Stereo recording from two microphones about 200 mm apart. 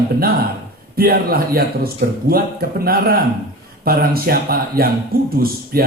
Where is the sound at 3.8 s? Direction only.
50° right (ahead or behind).